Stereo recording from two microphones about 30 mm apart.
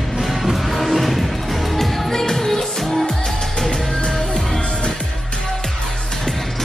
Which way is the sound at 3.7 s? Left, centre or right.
Left.